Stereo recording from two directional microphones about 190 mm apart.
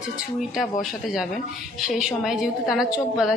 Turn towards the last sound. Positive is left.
turn(degrees=0)  # may be behind; listen again after turning